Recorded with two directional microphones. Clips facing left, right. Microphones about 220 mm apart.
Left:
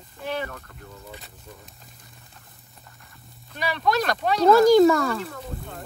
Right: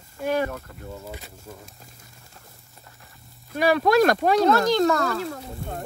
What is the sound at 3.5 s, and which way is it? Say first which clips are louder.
Speech: right 6 dB; 45° right (ahead or behind).